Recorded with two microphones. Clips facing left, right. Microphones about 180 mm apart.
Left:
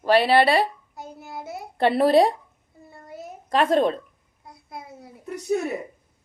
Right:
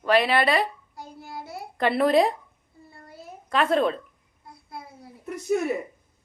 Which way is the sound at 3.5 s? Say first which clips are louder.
Left 2 dB; 35° left (ahead or behind).